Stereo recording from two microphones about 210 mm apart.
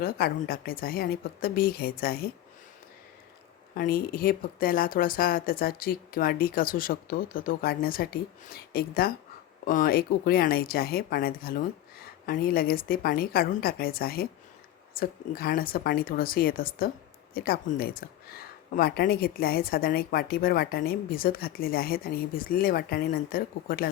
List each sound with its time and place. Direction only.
0.0 s speech: 45° left (ahead or behind)
3.8 s speech: 45° left (ahead or behind)